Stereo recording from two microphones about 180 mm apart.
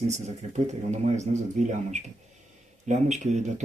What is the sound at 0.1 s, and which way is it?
Speech, 40° right (ahead or behind).